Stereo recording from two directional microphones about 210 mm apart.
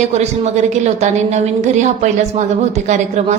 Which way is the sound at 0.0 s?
30° right (ahead or behind).